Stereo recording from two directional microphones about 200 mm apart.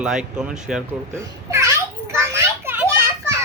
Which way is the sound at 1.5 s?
15° right (ahead or behind).